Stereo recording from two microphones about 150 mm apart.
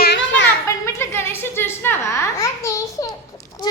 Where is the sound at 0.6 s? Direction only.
20° left (ahead or behind).